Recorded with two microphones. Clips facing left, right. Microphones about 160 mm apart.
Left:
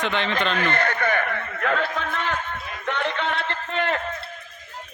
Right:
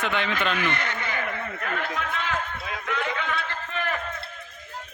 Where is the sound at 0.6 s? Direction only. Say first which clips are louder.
Left 5 dB; 55° left (ahead or behind).